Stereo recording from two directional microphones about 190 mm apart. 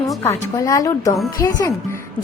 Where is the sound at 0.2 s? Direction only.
15° left (ahead or behind).